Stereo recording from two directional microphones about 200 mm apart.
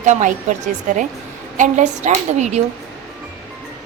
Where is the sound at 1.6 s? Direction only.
35° right (ahead or behind).